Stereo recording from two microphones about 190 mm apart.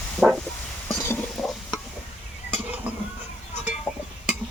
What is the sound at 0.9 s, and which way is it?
Stir, 10° left (ahead or behind).